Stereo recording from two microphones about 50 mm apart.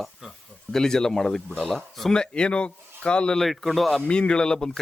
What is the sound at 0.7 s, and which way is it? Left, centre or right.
Speech, centre.